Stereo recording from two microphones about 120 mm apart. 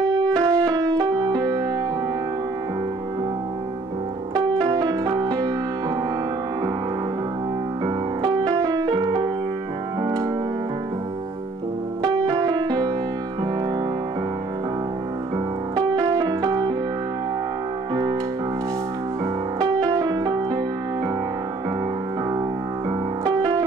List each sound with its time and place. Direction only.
0.1 s music: 30° right (ahead or behind)
4.6 s music: 30° right (ahead or behind)
7.8 s music: 35° right (ahead or behind)
8.8 s music: 40° right (ahead or behind)
12.1 s music: 30° right (ahead or behind)
15.3 s music: 35° right (ahead or behind)
19.6 s music: 30° right (ahead or behind)
23.2 s keyboard: 35° right (ahead or behind)